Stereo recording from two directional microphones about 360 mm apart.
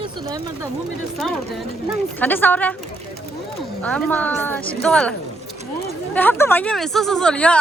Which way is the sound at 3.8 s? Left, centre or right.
Centre.